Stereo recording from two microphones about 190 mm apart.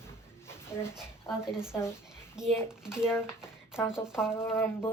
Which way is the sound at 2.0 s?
5° right (ahead or behind).